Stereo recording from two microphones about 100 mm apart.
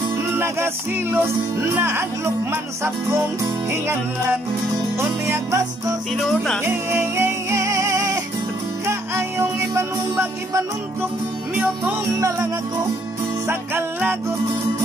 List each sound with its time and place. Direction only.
1.1 s speech: 25° right (ahead or behind)
5.2 s speech: 30° right (ahead or behind)
6.1 s music: centre (ahead or behind)
6.6 s music: 25° right (ahead or behind)
12.2 s music: 35° right (ahead or behind)
13.5 s speech: 20° right (ahead or behind)